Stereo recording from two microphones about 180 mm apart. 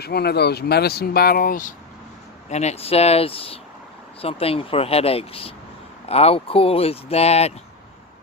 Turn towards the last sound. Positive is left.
turn(degrees=35)  # may be behind; listen again after turning